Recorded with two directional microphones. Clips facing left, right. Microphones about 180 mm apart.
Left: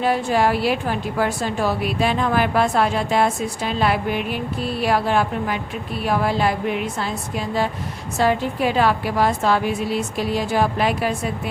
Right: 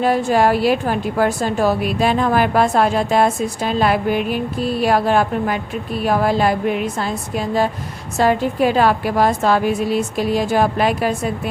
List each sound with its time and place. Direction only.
0.0 s a woman's voice: 45° right (ahead or behind)
8.2 s a woman's voice: 45° right (ahead or behind)